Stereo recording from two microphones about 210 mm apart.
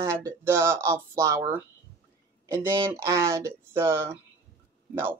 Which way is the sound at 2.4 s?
10° right (ahead or behind).